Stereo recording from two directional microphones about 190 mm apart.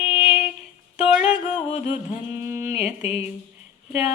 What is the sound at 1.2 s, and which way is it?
Music, 35° left (ahead or behind).